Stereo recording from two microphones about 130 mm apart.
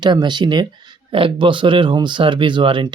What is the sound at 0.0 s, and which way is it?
Speech, 35° right (ahead or behind).